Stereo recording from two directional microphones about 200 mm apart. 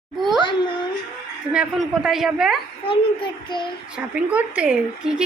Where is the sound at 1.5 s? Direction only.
Centre (ahead or behind).